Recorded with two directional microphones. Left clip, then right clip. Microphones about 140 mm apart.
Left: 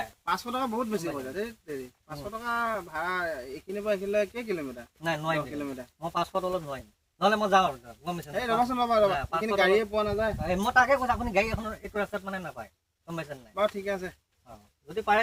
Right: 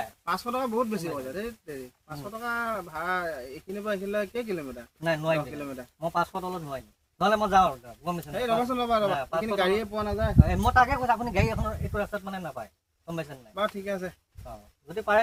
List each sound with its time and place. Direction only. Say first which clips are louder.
0.3 s speech: right 1 dB; 15° right (ahead or behind)
11.9 s speech: left 2 dB; 25° right (ahead or behind)